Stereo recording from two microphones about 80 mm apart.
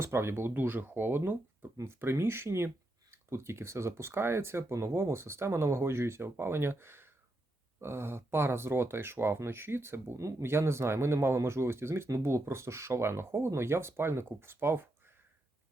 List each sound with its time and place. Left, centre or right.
0.0 s speech: right